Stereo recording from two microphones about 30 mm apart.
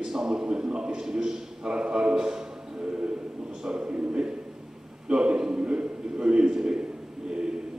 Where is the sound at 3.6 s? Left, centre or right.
Right.